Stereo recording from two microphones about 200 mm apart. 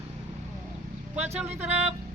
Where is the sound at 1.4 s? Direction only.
10° right (ahead or behind).